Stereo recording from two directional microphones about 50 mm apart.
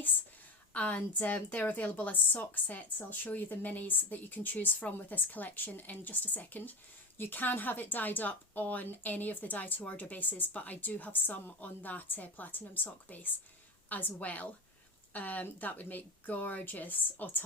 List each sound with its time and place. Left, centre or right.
0.7 s a woman's voice: left